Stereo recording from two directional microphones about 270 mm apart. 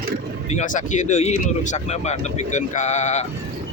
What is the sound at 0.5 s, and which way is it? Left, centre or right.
Speech, left.